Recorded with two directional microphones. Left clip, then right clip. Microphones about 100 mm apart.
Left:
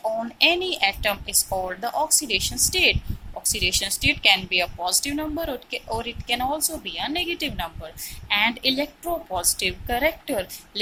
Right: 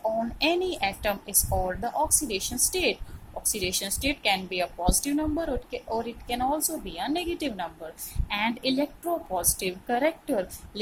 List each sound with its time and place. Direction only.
0.3 s speech: 15° right (ahead or behind)
1.5 s speech: centre (ahead or behind)
1.8 s speech: 15° right (ahead or behind)